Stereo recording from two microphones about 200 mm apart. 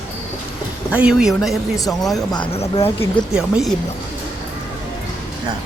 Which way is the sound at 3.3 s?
Centre (ahead or behind).